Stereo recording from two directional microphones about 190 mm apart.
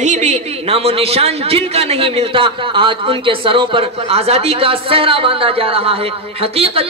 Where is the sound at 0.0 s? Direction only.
40° right (ahead or behind).